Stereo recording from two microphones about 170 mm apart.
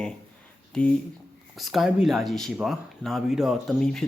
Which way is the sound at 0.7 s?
5° left (ahead or behind).